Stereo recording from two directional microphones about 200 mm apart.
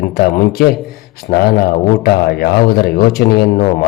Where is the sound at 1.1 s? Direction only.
50° left (ahead or behind).